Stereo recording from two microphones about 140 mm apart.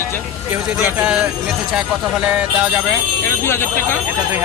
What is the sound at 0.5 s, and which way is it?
Speech, 15° right (ahead or behind).